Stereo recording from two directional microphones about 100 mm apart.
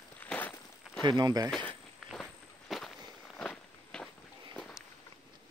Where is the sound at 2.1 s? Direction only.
Centre (ahead or behind).